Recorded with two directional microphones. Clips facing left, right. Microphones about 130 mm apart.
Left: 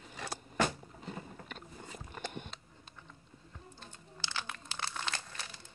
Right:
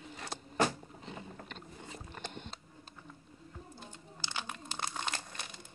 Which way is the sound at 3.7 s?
15° right (ahead or behind).